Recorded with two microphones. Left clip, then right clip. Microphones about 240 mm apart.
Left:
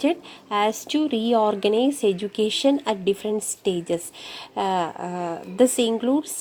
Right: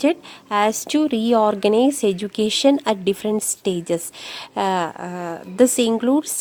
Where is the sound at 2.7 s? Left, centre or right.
Right.